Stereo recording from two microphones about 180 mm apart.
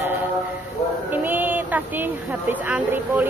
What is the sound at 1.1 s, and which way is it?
Speech, 10° right (ahead or behind).